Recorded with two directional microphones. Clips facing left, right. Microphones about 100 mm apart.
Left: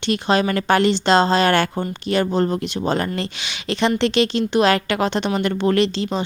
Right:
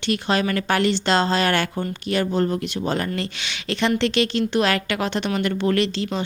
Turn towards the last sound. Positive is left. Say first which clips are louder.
# left 3 dB
turn(degrees=25)  # may be behind; listen again after turning